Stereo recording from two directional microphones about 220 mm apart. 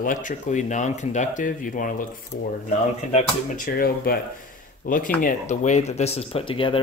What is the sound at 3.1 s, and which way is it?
Speech, 40° left (ahead or behind).